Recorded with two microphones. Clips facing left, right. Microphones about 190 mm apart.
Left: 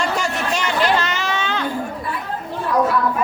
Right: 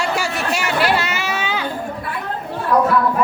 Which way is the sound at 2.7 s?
65° right (ahead or behind).